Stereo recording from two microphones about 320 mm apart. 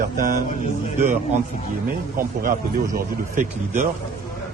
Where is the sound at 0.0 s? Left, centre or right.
Right.